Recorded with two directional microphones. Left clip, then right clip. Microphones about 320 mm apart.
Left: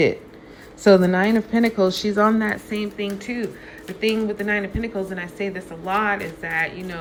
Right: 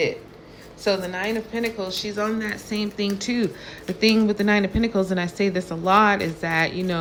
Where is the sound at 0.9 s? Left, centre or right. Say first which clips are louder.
Left 8 dB; left.